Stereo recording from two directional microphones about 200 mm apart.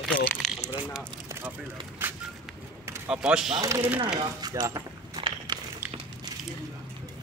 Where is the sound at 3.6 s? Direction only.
15° right (ahead or behind).